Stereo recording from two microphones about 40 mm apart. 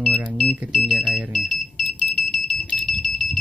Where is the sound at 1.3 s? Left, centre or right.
Centre.